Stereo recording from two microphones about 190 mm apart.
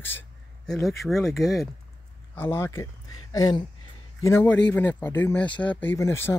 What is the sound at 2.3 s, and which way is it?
Speech, 10° left (ahead or behind).